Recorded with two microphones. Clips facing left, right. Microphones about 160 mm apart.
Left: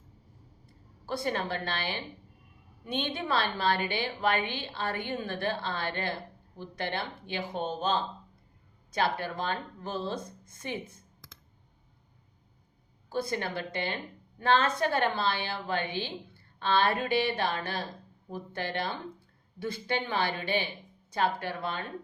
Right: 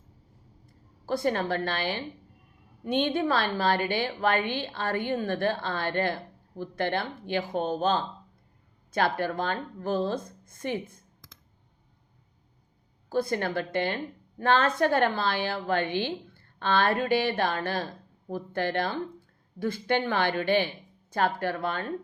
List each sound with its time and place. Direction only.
1.0 s a woman's voice: 45° right (ahead or behind)
13.1 s a woman's voice: 50° right (ahead or behind)